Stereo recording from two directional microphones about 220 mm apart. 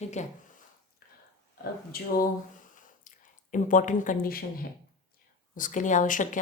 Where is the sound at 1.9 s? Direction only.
40° left (ahead or behind).